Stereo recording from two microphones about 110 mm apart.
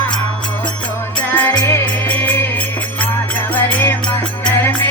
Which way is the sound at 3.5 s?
20° left (ahead or behind).